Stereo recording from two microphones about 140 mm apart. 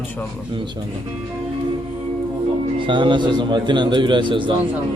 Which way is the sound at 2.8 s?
35° right (ahead or behind).